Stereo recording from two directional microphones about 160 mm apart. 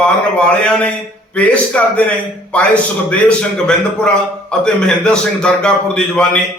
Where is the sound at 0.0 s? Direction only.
5° left (ahead or behind).